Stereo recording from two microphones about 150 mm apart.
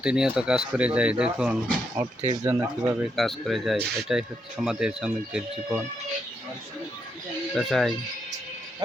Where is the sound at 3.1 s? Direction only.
Centre (ahead or behind).